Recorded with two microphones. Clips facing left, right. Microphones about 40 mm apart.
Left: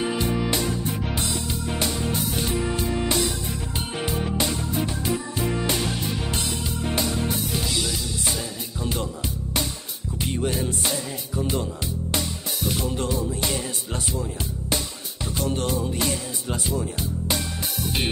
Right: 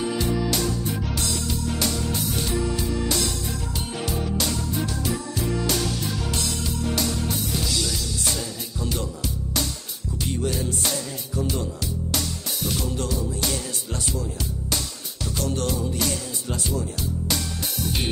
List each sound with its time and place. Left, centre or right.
0.0 s music: left
2.5 s music: left
3.2 s music: centre
10.3 s music: left
12.2 s music: centre
12.8 s music: left
15.4 s music: left